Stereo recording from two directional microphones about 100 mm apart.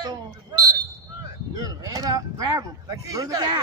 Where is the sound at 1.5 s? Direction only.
40° right (ahead or behind).